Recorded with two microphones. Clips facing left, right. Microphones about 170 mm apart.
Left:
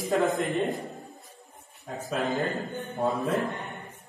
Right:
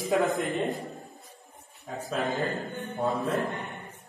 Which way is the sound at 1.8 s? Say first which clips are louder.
Left 1 dB; centre (ahead or behind).